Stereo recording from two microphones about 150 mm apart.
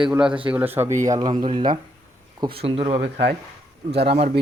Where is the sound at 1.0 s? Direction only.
25° right (ahead or behind); by 3.0 s 40° right (ahead or behind).